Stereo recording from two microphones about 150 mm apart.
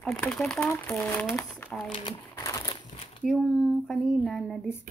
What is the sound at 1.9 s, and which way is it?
Typewriter, 25° left (ahead or behind).